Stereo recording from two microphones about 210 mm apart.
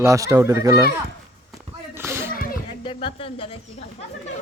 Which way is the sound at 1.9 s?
10° right (ahead or behind).